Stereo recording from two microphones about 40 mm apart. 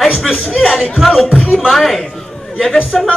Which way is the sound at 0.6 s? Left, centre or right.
Centre.